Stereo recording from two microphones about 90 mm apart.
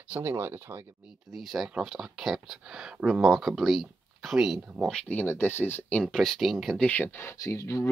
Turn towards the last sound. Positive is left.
turn(degrees=30)  # may be behind; listen again after turning